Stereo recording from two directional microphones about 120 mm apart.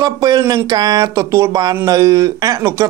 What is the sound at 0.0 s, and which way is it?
Speech, 30° right (ahead or behind).